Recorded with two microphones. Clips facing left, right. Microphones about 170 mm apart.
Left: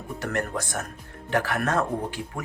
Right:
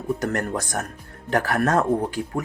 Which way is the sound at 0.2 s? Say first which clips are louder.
Right 3 dB; 40° right (ahead or behind).